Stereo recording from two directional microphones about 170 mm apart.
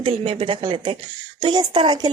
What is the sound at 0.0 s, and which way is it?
A woman's voice, 30° right (ahead or behind).